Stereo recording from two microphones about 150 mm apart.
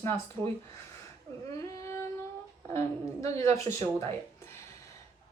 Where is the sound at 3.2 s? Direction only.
20° left (ahead or behind).